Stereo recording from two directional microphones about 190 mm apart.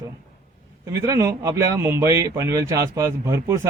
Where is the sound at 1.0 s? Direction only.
15° right (ahead or behind).